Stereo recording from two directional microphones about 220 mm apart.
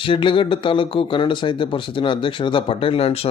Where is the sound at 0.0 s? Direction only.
25° left (ahead or behind).